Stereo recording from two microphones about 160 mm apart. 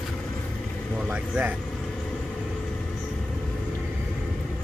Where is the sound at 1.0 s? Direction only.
10° right (ahead or behind).